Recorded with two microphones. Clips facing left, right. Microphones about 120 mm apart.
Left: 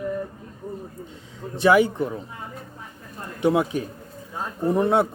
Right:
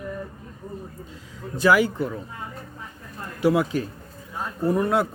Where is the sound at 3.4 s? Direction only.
25° left (ahead or behind).